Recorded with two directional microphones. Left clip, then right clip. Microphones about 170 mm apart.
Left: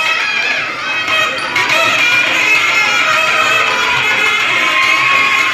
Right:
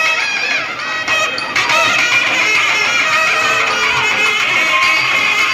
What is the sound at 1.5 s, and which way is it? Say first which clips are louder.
Music: even; 45° left (ahead or behind).